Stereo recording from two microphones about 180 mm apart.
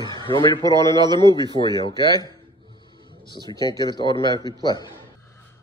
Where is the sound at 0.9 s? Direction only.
25° right (ahead or behind).